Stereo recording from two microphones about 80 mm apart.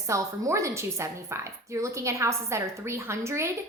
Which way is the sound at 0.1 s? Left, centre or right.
Right.